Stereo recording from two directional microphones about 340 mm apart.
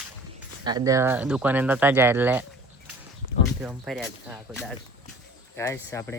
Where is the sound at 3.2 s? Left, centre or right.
Right.